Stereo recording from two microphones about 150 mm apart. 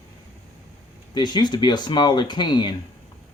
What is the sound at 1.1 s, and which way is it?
Speech, 30° left (ahead or behind).